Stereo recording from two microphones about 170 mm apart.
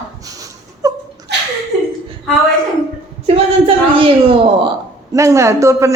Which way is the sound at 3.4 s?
35° right (ahead or behind).